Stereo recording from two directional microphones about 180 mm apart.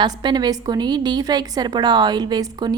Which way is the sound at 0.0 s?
25° right (ahead or behind).